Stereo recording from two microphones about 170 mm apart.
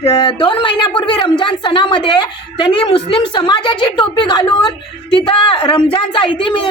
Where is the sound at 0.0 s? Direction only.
35° left (ahead or behind).